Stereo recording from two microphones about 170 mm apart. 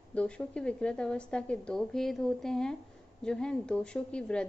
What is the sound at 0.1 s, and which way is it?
A woman's voice, 5° left (ahead or behind).